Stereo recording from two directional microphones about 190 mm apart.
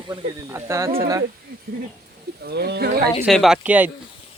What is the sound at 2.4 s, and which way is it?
Speech, 60° right (ahead or behind).